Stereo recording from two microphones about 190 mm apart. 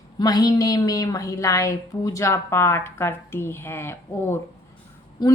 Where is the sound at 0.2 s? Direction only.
20° left (ahead or behind).